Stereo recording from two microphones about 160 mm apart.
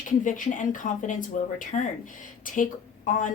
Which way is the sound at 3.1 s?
55° left (ahead or behind).